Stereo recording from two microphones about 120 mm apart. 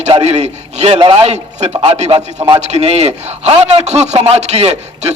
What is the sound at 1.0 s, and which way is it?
Speech, 45° right (ahead or behind).